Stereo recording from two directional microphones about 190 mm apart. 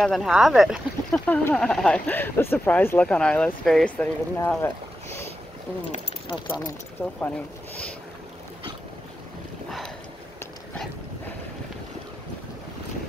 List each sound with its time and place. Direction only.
0.0 s speech: centre (ahead or behind)
5.9 s speech: 25° left (ahead or behind)
6.6 s speech: 10° left (ahead or behind)
9.7 s boat: centre (ahead or behind)